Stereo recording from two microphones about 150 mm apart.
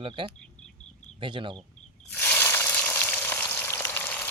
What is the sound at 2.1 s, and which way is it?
Frying, 10° left (ahead or behind).